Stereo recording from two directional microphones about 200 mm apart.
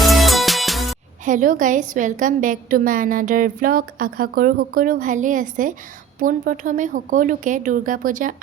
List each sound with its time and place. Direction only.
0.0 s music: centre (ahead or behind)
1.2 s a woman's voice: 40° right (ahead or behind)